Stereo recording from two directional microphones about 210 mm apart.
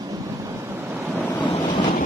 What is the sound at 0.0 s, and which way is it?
Waves, 15° right (ahead or behind).